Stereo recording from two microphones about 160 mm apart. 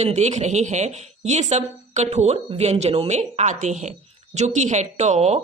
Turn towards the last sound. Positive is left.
turn(degrees=-45)  # may be behind; listen again after turning